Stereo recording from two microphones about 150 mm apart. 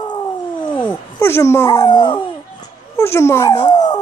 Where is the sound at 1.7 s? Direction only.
30° left (ahead or behind).